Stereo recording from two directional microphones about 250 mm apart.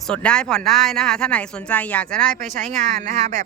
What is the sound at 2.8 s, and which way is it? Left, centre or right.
Speech, right.